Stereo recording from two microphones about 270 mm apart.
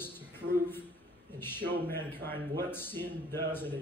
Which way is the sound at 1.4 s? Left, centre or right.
Centre.